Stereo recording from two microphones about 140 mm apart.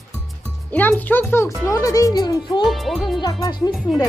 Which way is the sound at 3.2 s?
30° left (ahead or behind).